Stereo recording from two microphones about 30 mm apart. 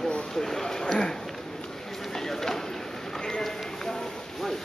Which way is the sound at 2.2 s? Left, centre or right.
Centre.